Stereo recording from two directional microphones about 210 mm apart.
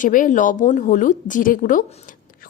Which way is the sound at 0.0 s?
40° left (ahead or behind).